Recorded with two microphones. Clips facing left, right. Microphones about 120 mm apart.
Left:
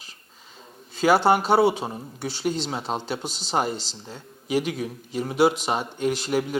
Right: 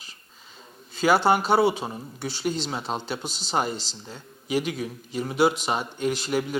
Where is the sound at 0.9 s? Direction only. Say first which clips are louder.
Left 2 dB; 50° left (ahead or behind).